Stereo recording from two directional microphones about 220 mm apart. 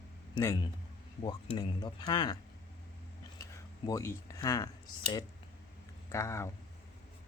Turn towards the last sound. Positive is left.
turn(degrees=15)  # may be behind; listen again after turning